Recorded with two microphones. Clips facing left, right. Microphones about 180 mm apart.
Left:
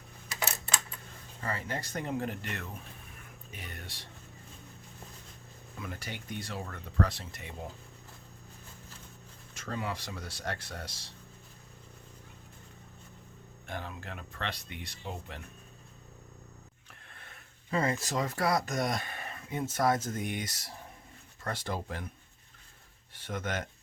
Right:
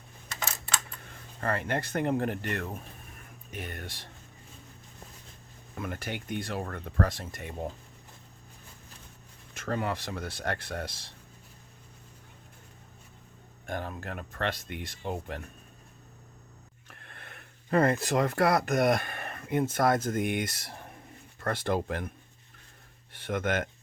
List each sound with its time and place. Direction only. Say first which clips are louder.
1.4 s speech: right 6 dB; 60° right (ahead or behind)
5.7 s speech: right 6 dB; 55° right (ahead or behind)
9.6 s speech: right 5 dB; 55° right (ahead or behind)
13.7 s speech: right 5 dB; 50° right (ahead or behind)
16.9 s speech: right 5 dB; 60° right (ahead or behind)
23.1 s speech: right 6 dB; 55° right (ahead or behind)